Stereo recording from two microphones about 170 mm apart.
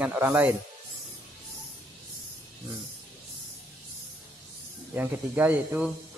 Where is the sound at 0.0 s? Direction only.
10° right (ahead or behind).